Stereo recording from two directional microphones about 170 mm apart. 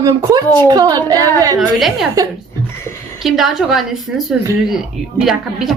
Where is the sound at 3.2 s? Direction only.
Centre (ahead or behind).